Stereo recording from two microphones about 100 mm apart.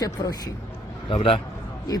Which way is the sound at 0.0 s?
40° left (ahead or behind).